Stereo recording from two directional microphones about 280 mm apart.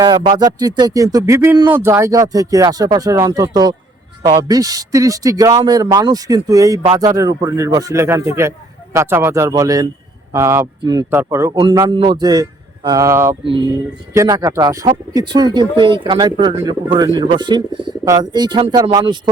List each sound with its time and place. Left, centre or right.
0.0 s speech: centre